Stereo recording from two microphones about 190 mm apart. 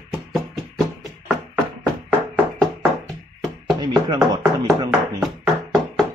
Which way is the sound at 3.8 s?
20° right (ahead or behind).